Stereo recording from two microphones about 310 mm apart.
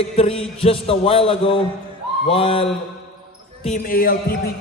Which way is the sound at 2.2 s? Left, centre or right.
Centre.